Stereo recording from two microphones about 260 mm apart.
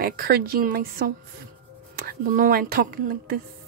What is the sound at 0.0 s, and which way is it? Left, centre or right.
Speech, right.